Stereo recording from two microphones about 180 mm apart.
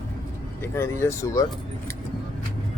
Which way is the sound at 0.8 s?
15° left (ahead or behind).